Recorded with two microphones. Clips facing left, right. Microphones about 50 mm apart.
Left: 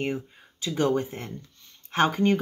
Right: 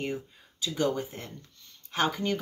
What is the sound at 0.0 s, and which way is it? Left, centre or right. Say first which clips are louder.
Speech: left 4 dB; left.